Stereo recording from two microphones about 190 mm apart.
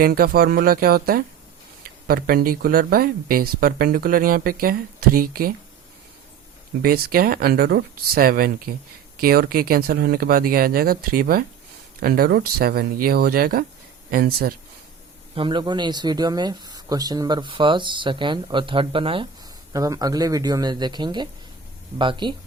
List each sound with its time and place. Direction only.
0.0 s speech: 50° right (ahead or behind)
6.8 s speech: 50° right (ahead or behind)
15.4 s speech: 25° right (ahead or behind)